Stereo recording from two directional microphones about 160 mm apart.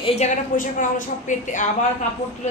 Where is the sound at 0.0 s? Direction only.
45° left (ahead or behind).